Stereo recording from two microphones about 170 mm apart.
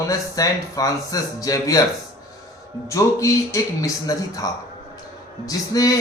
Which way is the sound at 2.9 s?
20° left (ahead or behind).